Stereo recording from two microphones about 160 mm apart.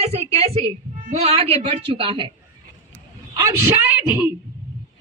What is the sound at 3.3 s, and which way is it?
Speech, 20° right (ahead or behind).